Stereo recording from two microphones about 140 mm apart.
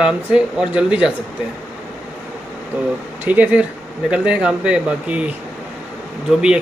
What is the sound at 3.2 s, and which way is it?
Speech, 10° right (ahead or behind).